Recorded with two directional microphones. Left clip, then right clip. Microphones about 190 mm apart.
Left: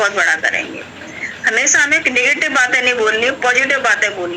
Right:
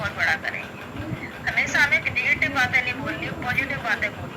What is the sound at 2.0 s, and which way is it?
Speech, 45° left (ahead or behind).